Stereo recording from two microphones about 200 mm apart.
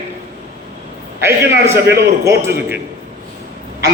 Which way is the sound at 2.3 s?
10° right (ahead or behind).